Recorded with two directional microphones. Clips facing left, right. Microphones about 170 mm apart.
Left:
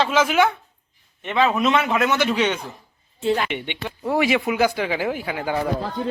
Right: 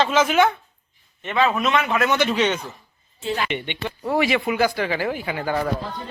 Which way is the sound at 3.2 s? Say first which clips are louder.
Left 4 dB; 50° left (ahead or behind).